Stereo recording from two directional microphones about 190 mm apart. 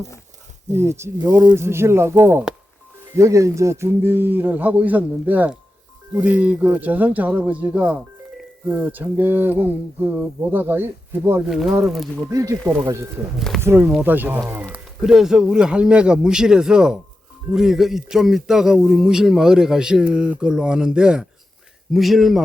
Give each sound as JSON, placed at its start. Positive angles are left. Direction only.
{"t": 0.7, "sound": "speech", "side_deg": -15}
{"t": 11.4, "sound": "speech", "side_deg": 0}
{"t": 12.3, "sound": "speech", "side_deg": -15}